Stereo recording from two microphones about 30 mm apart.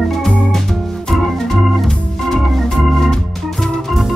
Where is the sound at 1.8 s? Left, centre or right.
Centre.